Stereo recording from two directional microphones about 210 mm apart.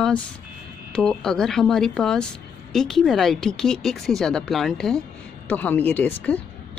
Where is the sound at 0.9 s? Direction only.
5° left (ahead or behind).